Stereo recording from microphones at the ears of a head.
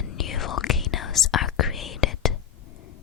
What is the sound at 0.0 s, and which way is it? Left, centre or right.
Whispering, left.